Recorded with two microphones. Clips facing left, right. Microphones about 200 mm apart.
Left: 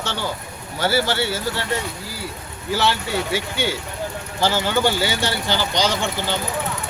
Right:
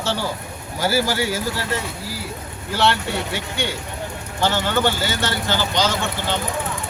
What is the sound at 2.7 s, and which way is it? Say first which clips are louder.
Speech: right 1 dB; centre (ahead or behind).